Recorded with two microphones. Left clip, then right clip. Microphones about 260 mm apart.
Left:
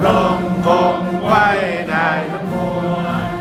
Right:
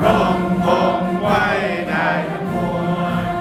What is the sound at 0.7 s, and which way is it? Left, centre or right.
Chant, centre.